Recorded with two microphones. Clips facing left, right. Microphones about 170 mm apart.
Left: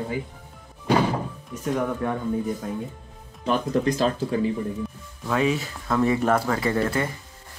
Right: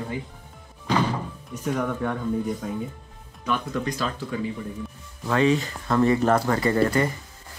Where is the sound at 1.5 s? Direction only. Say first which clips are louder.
Left 1 dB; centre (ahead or behind).